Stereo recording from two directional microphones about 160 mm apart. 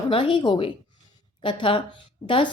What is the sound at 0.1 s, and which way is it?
A woman's voice, 30° left (ahead or behind).